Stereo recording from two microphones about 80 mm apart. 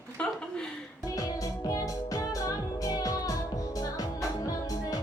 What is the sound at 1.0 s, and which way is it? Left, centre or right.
Music, left.